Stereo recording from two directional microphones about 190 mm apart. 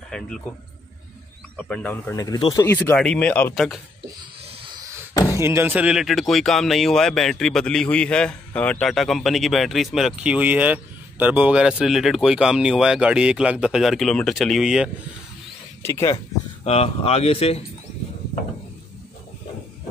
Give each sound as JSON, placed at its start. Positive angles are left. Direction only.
{"t": 0.1, "sound": "speech", "side_deg": 5}
{"t": 1.6, "sound": "speech", "side_deg": 5}
{"t": 3.5, "sound": "speech", "side_deg": 0}
{"t": 4.2, "sound": "a sound", "side_deg": -25}
{"t": 5.1, "sound": "a sound", "side_deg": 15}
{"t": 5.4, "sound": "speech", "side_deg": -10}
{"t": 15.8, "sound": "speech", "side_deg": 15}
{"t": 16.6, "sound": "speech", "side_deg": 30}